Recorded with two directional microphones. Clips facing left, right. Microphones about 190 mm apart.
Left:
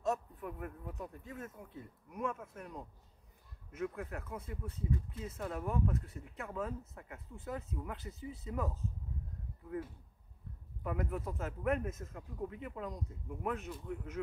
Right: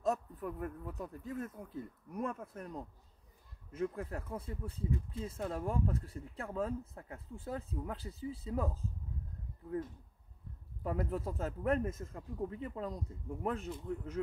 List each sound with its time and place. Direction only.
0.0 s speech: 40° right (ahead or behind)
10.8 s speech: 30° right (ahead or behind)